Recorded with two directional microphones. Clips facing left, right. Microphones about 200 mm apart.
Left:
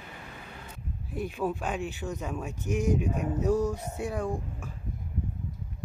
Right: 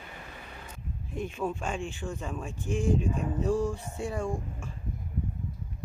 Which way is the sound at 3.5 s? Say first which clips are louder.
Left 2 dB; 40° left (ahead or behind).